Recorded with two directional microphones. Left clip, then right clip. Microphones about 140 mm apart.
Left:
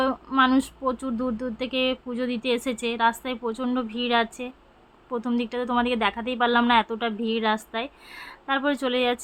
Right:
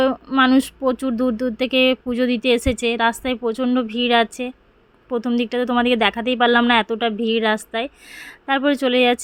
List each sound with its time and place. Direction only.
0.0 s speech: 35° right (ahead or behind)